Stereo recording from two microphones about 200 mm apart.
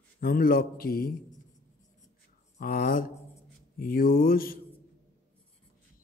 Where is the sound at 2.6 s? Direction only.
50° left (ahead or behind).